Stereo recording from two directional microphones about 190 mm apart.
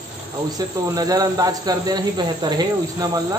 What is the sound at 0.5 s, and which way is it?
Speech, 20° right (ahead or behind).